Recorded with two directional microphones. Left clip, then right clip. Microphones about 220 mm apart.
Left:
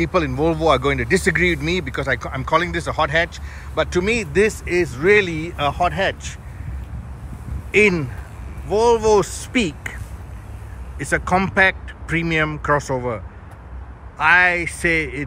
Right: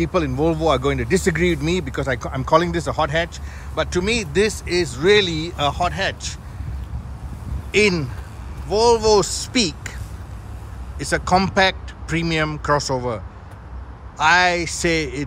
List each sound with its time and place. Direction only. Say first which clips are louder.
0.0 s speech: left 1 dB; 15° right (ahead or behind)
7.7 s speech: left 2 dB; 10° right (ahead or behind)
11.0 s speech: right 1 dB; 15° right (ahead or behind)